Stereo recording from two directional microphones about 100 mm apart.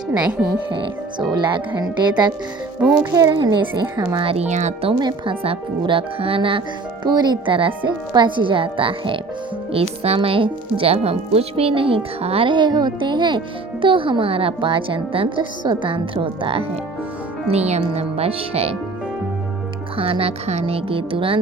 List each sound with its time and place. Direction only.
1.3 s speech: 50° right (ahead or behind)
3.2 s speech: 50° right (ahead or behind)
4.2 s speech: 75° right (ahead or behind)
4.9 s speech: 55° right (ahead or behind)
7.0 s speech: 45° right (ahead or behind)
7.5 s speech: 55° right (ahead or behind)
9.7 s speech: 80° right
12.5 s speech: 50° right (ahead or behind)
17.5 s speech: 90° right
20.0 s speech: 70° right (ahead or behind)